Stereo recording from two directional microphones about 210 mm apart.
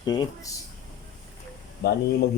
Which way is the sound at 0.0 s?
20° left (ahead or behind).